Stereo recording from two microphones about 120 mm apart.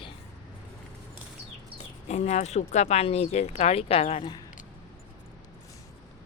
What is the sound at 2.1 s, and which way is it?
Speech, 70° left (ahead or behind).